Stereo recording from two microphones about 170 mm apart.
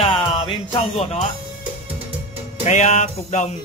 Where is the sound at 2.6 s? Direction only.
45° left (ahead or behind).